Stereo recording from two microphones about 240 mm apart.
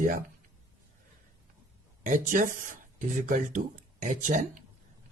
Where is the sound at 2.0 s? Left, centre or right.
Right.